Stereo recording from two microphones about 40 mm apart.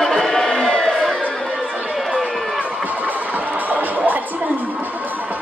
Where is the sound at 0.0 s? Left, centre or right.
Centre.